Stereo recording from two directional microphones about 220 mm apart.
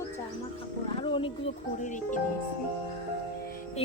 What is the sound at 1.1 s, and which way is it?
Speech, 25° left (ahead or behind).